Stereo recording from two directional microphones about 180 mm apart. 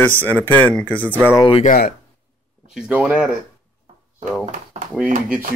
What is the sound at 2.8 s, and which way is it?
Speech, 5° right (ahead or behind).